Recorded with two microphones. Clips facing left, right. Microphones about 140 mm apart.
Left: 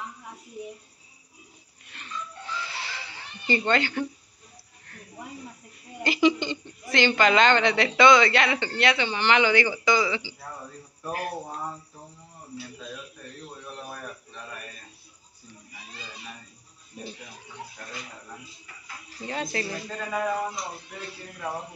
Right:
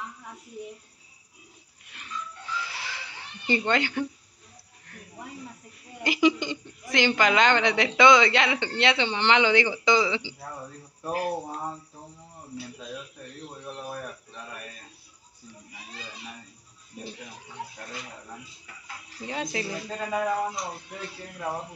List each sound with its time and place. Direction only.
2.6 s a sound: 15° right (ahead or behind)
6.0 s a woman's voice: 15° right (ahead or behind)
19.2 s a woman's voice: 10° right (ahead or behind)